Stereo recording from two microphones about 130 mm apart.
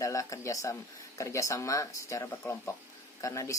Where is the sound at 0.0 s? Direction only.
25° left (ahead or behind).